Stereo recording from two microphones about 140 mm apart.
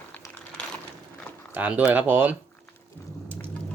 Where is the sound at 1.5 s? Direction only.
10° right (ahead or behind).